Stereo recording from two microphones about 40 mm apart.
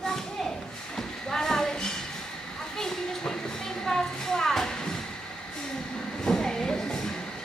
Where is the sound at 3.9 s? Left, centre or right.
Centre.